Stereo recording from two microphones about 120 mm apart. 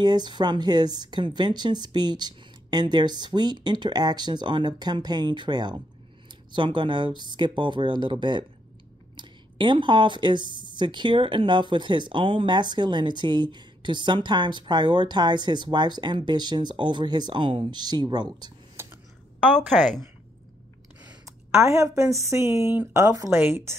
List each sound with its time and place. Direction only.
0.0 s speech: 35° right (ahead or behind)
21.5 s a woman's voice: 25° right (ahead or behind)